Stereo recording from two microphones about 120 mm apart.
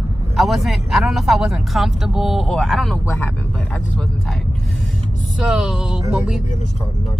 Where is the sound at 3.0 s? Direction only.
15° left (ahead or behind); by 6.4 s centre (ahead or behind).